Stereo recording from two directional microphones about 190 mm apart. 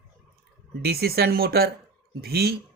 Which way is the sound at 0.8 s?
55° right (ahead or behind).